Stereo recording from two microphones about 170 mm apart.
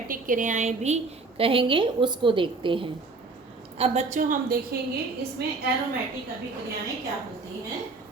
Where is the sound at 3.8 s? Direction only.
45° right (ahead or behind).